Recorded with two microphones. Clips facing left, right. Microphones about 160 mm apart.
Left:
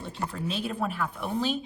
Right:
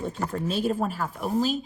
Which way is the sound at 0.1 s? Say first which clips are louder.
Right 4 dB; 45° right (ahead or behind).